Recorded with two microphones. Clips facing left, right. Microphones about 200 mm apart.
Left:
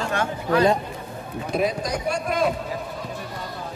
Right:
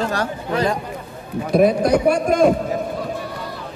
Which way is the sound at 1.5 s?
50° right (ahead or behind).